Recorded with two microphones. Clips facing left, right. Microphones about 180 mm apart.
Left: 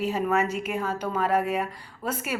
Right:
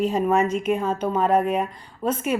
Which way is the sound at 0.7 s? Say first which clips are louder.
Right 6 dB; 25° right (ahead or behind).